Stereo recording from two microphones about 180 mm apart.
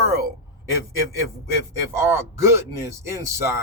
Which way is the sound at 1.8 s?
15° right (ahead or behind).